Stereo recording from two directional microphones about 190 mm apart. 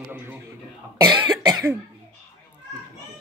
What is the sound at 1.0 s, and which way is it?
Cough, 20° right (ahead or behind).